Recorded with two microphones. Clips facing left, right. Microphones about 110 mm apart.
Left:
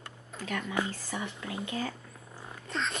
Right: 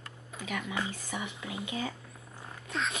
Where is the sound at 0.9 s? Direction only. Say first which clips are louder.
Left 1 dB; 10° right (ahead or behind).